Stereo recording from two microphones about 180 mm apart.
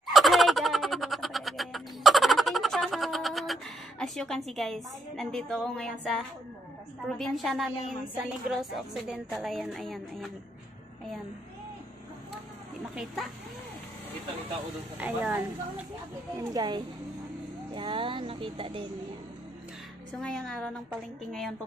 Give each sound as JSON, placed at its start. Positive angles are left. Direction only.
{"t": 0.0, "sound": "a sound", "side_deg": 0}
{"t": 7.1, "sound": "speech", "side_deg": 0}
{"t": 12.9, "sound": "speech", "side_deg": 0}
{"t": 15.0, "sound": "speech", "side_deg": -10}
{"t": 16.3, "sound": "speech", "side_deg": -20}
{"t": 20.1, "sound": "speech", "side_deg": 5}